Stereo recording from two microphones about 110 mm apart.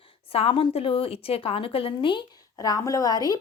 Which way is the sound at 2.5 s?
35° left (ahead or behind).